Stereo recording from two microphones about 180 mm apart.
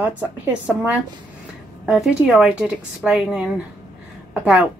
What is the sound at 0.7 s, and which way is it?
A woman's voice, 5° right (ahead or behind).